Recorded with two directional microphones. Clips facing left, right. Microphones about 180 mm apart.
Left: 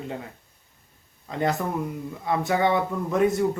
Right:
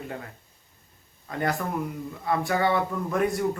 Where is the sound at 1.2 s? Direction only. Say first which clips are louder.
Left 2 dB; 20° left (ahead or behind).